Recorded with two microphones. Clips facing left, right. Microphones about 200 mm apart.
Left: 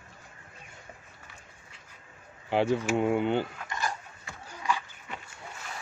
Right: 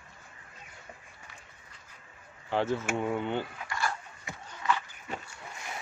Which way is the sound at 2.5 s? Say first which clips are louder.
Left 4 dB; 15° left (ahead or behind).